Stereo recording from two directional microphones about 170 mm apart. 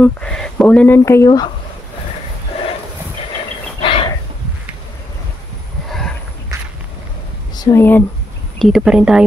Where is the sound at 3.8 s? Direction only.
30° left (ahead or behind).